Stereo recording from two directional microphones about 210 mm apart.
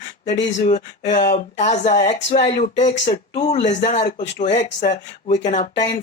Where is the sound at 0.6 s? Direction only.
30° left (ahead or behind).